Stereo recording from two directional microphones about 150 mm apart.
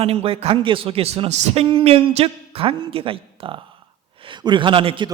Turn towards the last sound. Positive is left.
turn(degrees=-35)  # may be behind; listen again after turning